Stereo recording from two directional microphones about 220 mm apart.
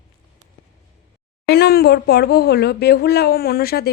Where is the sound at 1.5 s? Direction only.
45° left (ahead or behind).